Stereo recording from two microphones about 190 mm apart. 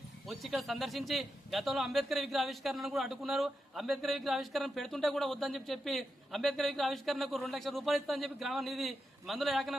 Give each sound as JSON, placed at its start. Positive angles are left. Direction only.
{"t": 0.3, "sound": "a man's voice", "side_deg": 0}